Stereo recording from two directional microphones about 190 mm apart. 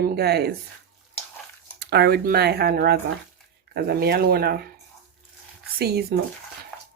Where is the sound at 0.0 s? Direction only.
55° right (ahead or behind).